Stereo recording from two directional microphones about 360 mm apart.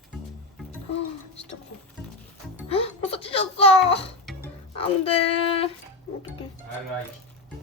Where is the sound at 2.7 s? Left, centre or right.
Centre.